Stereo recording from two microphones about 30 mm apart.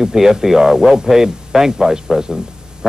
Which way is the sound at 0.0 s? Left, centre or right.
Centre.